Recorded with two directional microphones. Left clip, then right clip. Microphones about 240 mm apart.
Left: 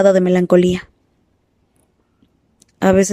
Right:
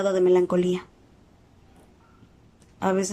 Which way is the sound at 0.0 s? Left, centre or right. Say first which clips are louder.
Left 7 dB; left.